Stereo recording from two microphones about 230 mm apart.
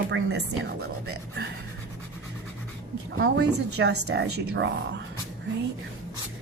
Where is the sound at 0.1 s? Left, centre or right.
Right.